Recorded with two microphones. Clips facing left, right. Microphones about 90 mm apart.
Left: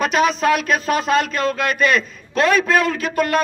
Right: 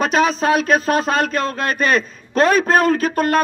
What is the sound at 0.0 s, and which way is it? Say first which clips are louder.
Speech: right 1 dB; 35° right (ahead or behind).